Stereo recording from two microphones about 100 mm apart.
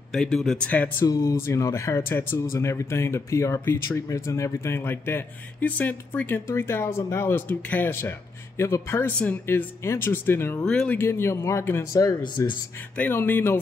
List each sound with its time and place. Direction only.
0.1 s speech: 5° left (ahead or behind)
0.7 s speech: 15° left (ahead or behind)
1.0 s speech: 30° left (ahead or behind)
10.6 s speech: 10° left (ahead or behind)
11.0 s speech: 25° left (ahead or behind)
11.9 s speech: 35° left (ahead or behind)
12.9 s speech: 20° left (ahead or behind)